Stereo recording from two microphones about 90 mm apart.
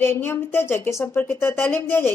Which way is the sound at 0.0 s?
25° left (ahead or behind).